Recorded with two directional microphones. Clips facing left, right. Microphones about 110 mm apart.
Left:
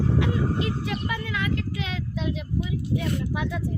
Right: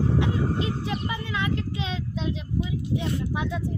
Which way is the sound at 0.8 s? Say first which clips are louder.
Even; 30° right (ahead or behind).